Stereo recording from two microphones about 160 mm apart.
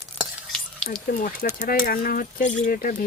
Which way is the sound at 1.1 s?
55° left (ahead or behind).